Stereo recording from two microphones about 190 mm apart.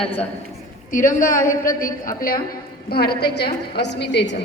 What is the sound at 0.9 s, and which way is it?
A woman's voice, 45° left (ahead or behind).